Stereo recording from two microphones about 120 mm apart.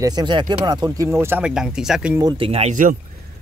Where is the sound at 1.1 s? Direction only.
20° right (ahead or behind).